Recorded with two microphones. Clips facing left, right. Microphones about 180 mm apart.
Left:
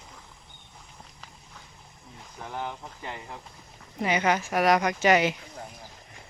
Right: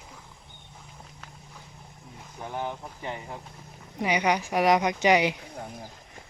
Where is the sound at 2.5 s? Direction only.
20° right (ahead or behind).